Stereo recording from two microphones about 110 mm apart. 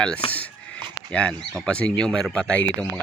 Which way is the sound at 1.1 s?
10° left (ahead or behind).